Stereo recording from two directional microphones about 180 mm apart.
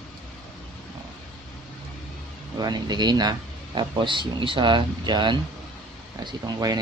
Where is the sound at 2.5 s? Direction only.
20° right (ahead or behind).